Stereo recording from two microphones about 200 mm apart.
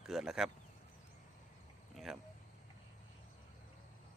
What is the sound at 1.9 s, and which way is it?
Speech, centre (ahead or behind).